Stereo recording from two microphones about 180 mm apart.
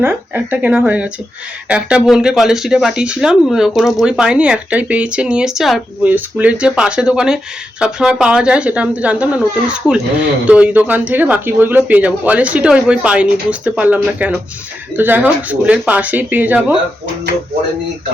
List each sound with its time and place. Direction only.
0.0 s speech: 10° right (ahead or behind)